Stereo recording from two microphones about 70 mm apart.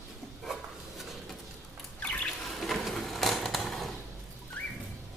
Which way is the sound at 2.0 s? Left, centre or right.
Centre.